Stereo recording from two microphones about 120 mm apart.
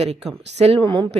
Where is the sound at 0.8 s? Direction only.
45° right (ahead or behind).